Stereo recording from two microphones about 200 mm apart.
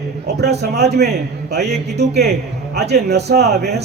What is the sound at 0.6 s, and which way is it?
A man's voice, 55° right (ahead or behind).